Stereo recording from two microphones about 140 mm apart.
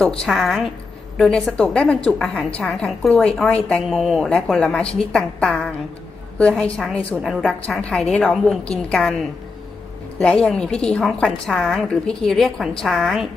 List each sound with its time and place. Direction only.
0.0 s a woman's voice: centre (ahead or behind)
10.2 s a woman's voice: 5° left (ahead or behind)